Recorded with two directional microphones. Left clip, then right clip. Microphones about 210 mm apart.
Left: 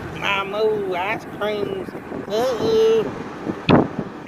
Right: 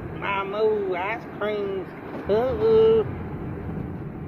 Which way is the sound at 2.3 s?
5° left (ahead or behind).